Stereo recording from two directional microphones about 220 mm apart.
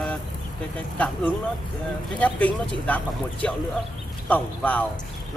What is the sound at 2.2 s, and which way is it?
Speech, 5° left (ahead or behind).